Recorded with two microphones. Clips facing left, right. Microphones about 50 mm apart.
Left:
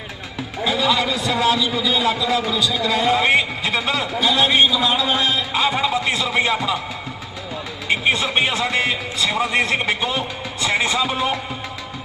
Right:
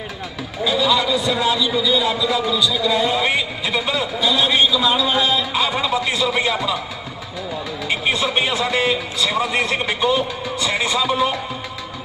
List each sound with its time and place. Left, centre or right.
0.6 s a man's voice: left
1.1 s speech: left
7.9 s a man's voice: left